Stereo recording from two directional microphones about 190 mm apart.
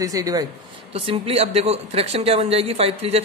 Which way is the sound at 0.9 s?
30° right (ahead or behind).